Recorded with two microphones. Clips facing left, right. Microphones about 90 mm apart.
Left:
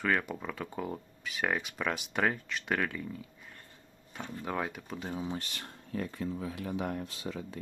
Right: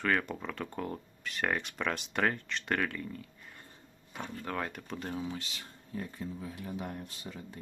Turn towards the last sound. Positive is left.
turn(degrees=90)